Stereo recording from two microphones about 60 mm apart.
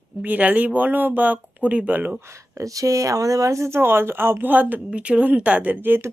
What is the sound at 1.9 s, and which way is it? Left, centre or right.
Speech, right.